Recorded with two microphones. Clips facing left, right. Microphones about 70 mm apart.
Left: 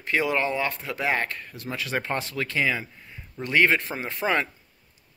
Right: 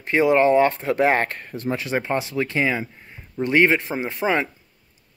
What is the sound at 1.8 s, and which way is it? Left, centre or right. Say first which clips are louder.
Speech: right 1 dB; centre.